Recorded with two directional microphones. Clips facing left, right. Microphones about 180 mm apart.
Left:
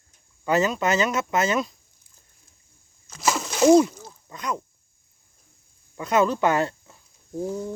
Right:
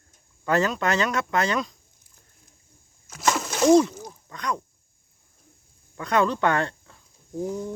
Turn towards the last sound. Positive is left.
turn(degrees=0)  # may be behind; listen again after turning